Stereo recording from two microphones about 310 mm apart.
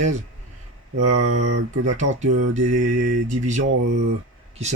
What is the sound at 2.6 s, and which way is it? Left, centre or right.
Speech, right.